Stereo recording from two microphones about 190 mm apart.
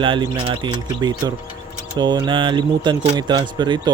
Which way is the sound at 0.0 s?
25° right (ahead or behind).